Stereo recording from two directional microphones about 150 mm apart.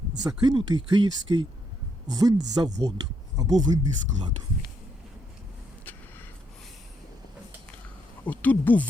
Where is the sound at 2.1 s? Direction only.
25° right (ahead or behind).